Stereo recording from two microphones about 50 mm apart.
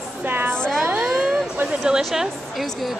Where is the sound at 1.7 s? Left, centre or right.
Centre.